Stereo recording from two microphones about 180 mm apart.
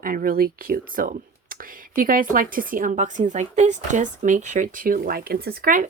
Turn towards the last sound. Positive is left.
turn(degrees=-50)  # may be behind; listen again after turning